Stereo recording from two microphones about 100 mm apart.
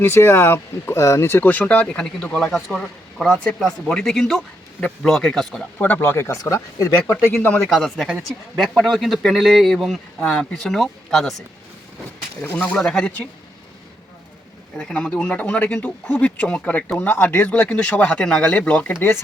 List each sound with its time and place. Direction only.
0.0 s speech: 25° left (ahead or behind); by 5.6 s 5° left (ahead or behind)
5.8 s speech: 20° left (ahead or behind)
7.4 s speech: 10° left (ahead or behind)
12.4 s speech: 15° left (ahead or behind)
14.8 s speech: 5° left (ahead or behind)